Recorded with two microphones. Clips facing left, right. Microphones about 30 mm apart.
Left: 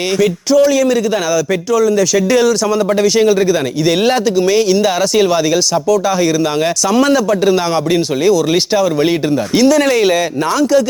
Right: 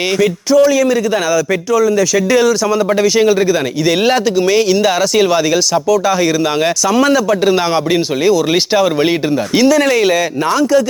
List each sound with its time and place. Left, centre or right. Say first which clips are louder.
0.2 s a man's voice: even; centre
7.4 s speech: even; right
9.6 s a man's voice: even; centre